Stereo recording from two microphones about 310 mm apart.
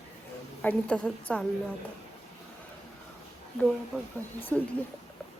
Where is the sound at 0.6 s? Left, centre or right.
Centre.